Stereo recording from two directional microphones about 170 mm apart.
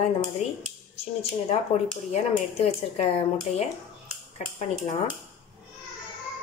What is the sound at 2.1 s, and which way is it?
Speech, 35° left (ahead or behind).